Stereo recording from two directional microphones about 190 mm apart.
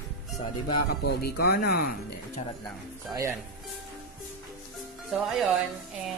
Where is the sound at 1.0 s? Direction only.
60° left (ahead or behind).